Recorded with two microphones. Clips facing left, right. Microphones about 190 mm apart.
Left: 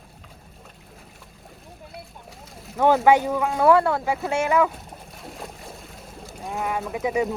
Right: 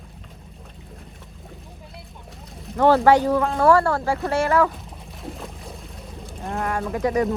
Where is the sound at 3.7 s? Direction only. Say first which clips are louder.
Even; 20° left (ahead or behind).